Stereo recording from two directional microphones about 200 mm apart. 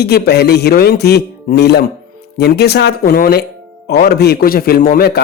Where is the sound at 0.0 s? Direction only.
55° left (ahead or behind).